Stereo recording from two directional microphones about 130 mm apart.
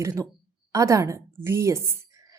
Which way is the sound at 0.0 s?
25° right (ahead or behind).